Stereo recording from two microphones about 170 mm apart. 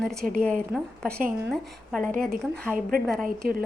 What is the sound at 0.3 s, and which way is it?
Speech, 50° right (ahead or behind).